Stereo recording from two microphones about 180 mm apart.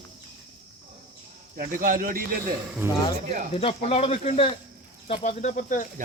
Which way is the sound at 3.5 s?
35° left (ahead or behind).